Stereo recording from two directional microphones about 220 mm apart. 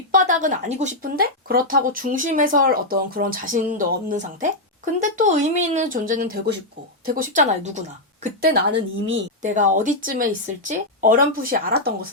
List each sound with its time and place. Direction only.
0.1 s speech: 35° right (ahead or behind)
9.0 s a woman's voice: 60° right (ahead or behind)
9.4 s speech: 35° right (ahead or behind)